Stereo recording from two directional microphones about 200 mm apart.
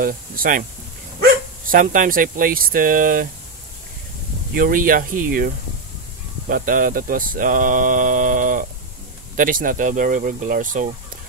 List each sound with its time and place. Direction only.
0.0 s speech: 45° right (ahead or behind)
4.6 s speech: 45° right (ahead or behind)
6.5 s speech: 45° right (ahead or behind)